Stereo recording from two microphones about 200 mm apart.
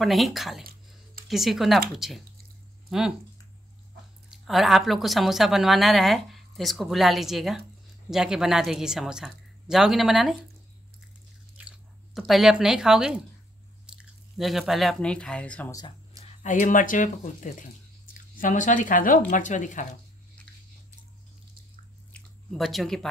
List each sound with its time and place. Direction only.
0.0 s a woman's voice: centre (ahead or behind)
4.5 s a woman's voice: centre (ahead or behind)
11.5 s speech: 5° right (ahead or behind)
16.4 s speech: 40° left (ahead or behind)
22.1 s chewing: centre (ahead or behind)